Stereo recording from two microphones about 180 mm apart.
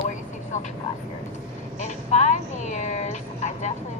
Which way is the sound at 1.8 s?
40° left (ahead or behind).